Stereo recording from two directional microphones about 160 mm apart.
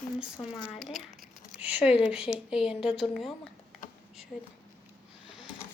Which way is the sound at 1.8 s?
40° left (ahead or behind).